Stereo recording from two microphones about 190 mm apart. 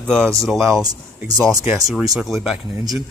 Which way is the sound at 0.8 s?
20° right (ahead or behind).